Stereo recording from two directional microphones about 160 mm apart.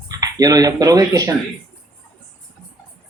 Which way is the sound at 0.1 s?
25° right (ahead or behind).